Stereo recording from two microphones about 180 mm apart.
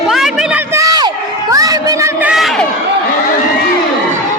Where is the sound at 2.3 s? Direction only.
Centre (ahead or behind).